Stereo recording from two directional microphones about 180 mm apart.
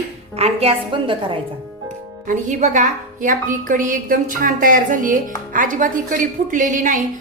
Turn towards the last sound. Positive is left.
turn(degrees=-45)  # may be behind; listen again after turning